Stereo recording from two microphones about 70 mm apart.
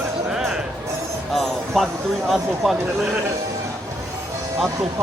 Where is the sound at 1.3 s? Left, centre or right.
Centre.